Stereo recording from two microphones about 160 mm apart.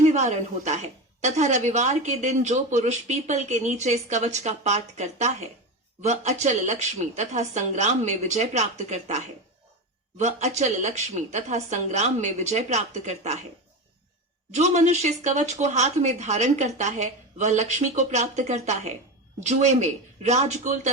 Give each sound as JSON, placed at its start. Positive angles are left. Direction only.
{"t": 0.0, "sound": "a woman's voice", "side_deg": -45}
{"t": 14.5, "sound": "a woman's voice", "side_deg": -45}